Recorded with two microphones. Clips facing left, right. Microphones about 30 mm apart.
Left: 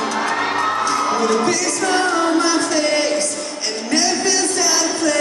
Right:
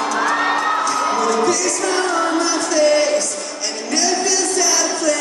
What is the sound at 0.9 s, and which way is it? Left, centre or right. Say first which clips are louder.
Music: even; centre.